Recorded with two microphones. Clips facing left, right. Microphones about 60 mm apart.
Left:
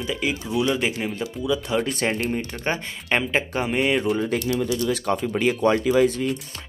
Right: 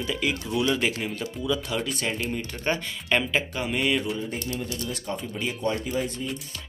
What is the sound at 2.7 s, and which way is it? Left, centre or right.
Speech, left.